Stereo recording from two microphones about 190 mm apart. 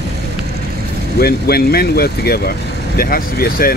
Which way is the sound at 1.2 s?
55° left (ahead or behind).